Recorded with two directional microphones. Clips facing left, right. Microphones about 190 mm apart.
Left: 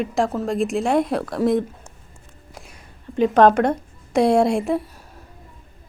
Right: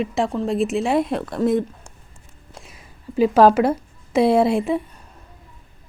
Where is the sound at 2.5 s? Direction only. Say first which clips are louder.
Even; centre (ahead or behind).